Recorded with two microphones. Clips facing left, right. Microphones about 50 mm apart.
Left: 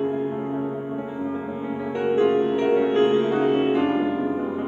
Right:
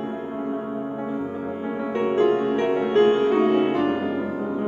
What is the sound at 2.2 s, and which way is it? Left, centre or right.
Music, left.